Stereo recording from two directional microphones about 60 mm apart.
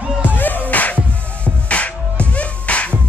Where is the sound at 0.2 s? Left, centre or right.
Left.